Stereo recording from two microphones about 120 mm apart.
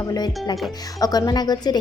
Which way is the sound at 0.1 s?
35° left (ahead or behind).